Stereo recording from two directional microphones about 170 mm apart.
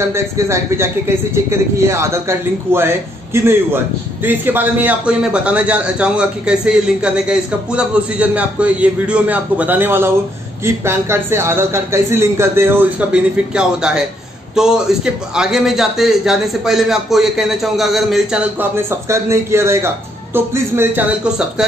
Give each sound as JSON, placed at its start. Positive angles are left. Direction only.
{"t": 0.1, "sound": "a man's voice", "side_deg": -15}